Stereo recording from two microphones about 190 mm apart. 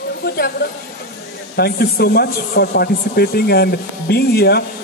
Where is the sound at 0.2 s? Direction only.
55° left (ahead or behind).